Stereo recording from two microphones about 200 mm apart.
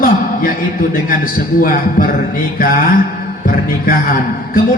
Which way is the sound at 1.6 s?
45° left (ahead or behind).